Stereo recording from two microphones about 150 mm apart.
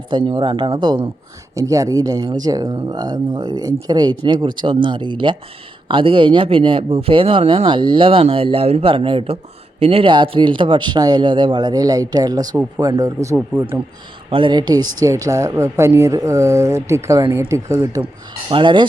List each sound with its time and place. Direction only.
0.1 s speech: 30° right (ahead or behind)
14.3 s speech: 35° right (ahead or behind)
18.5 s speech: 30° right (ahead or behind)